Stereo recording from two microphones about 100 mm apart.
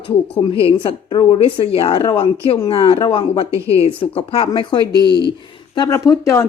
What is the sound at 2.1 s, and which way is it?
A woman's voice, 65° left (ahead or behind).